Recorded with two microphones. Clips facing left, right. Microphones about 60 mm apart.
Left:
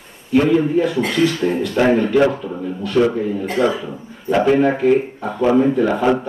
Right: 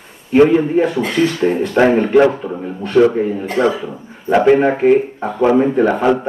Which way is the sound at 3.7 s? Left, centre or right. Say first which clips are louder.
Right 2 dB; centre.